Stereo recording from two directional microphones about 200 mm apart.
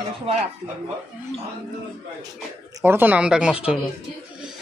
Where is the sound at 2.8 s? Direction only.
10° right (ahead or behind).